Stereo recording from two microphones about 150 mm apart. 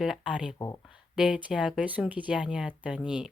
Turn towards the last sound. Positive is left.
turn(degrees=-5)  # may be behind; listen again after turning